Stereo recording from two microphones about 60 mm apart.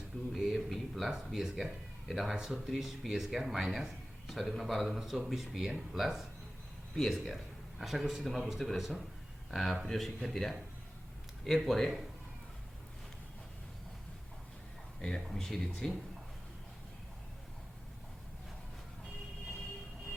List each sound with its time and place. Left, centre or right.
0.3 s speech: centre
15.0 s speech: centre